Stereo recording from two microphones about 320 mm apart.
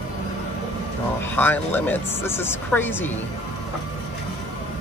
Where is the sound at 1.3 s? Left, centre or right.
Centre.